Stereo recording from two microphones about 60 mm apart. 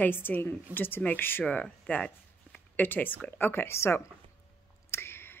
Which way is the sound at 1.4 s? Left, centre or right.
Centre.